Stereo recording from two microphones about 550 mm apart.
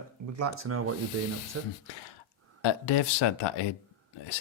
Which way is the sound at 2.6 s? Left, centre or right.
Left.